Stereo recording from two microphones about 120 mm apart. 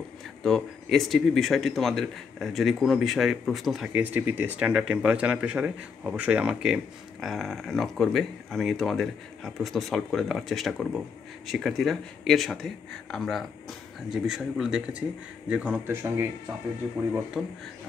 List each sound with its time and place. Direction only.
0.4 s speech: centre (ahead or behind)
3.9 s speech: 15° right (ahead or behind)
15.9 s speech: 25° right (ahead or behind)
17.4 s speech: 5° right (ahead or behind)